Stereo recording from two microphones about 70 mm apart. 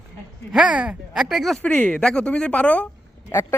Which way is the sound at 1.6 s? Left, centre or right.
Left.